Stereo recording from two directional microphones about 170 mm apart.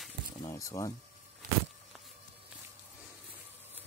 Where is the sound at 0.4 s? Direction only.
20° left (ahead or behind).